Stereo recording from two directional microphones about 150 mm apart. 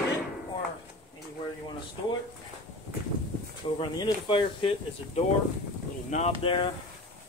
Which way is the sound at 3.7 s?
30° left (ahead or behind).